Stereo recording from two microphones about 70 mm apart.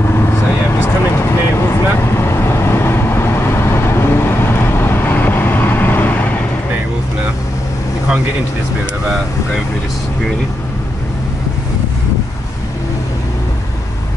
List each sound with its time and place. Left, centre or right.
0.7 s vehicle: left